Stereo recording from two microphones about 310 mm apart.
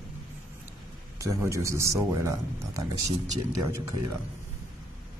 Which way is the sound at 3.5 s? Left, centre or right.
Right.